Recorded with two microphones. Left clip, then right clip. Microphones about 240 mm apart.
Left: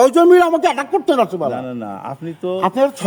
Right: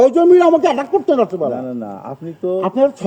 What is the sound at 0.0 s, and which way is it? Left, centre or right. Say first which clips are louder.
A man's voice: even; left.